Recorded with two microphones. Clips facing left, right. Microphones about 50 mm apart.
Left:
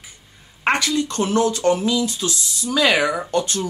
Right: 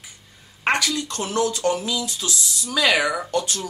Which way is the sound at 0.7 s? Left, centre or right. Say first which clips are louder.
Left 3 dB; centre.